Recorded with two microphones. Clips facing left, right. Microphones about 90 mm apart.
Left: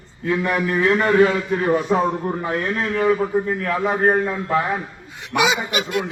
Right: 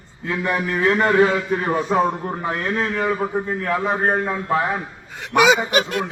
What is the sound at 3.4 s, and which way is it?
Speech, 20° right (ahead or behind).